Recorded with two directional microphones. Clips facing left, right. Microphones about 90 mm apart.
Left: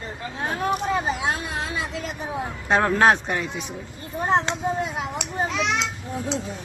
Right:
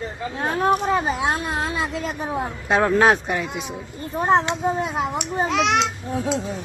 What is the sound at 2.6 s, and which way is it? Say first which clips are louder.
Speech: right 1 dB; centre (ahead or behind).